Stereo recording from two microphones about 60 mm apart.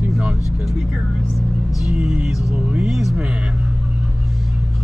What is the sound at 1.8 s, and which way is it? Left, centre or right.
Speech, centre.